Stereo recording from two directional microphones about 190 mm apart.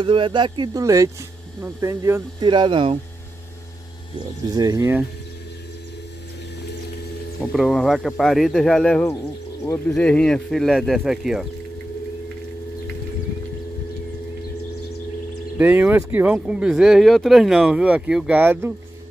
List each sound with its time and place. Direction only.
0.0 s speech: 25° right (ahead or behind)
2.4 s speech: 25° right (ahead or behind)
4.6 s speech: 20° right (ahead or behind)
7.5 s speech: centre (ahead or behind)
15.5 s speech: 10° right (ahead or behind)